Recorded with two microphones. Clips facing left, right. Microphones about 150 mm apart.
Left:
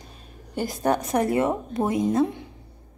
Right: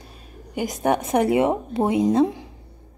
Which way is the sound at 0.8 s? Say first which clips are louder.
Right 3 dB; 25° right (ahead or behind).